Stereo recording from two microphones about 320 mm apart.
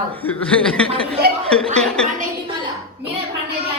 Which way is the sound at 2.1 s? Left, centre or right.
Centre.